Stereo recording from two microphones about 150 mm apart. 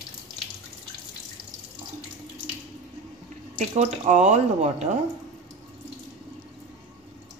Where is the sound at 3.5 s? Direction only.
50° right (ahead or behind).